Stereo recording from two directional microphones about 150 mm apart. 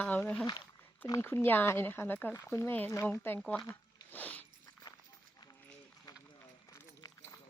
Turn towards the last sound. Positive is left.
turn(degrees=20)  # may be behind; listen again after turning